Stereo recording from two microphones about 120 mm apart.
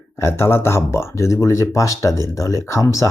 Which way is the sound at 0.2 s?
20° left (ahead or behind).